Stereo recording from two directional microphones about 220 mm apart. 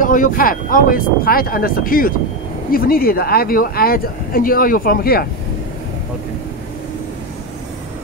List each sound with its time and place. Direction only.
0.0 s speech: 35° left (ahead or behind)